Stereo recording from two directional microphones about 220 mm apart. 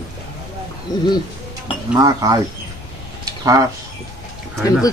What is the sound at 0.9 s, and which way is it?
Speech, 15° left (ahead or behind).